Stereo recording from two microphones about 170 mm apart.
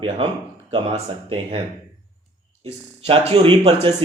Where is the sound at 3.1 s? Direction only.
30° right (ahead or behind).